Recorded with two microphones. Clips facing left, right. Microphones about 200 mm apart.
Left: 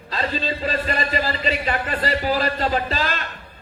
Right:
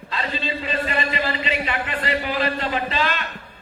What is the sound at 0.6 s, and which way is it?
A man's voice, 40° left (ahead or behind).